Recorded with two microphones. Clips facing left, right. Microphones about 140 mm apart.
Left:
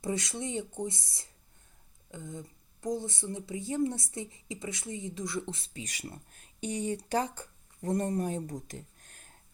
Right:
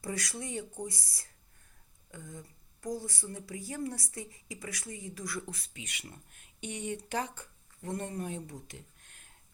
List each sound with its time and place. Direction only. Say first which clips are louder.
0.0 s speech: left 4 dB; 20° left (ahead or behind); by 9.3 s 40° left (ahead or behind)